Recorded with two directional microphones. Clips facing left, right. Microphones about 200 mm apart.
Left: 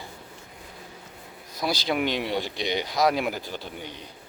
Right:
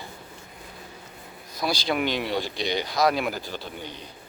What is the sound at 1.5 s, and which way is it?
Speech, 20° left (ahead or behind).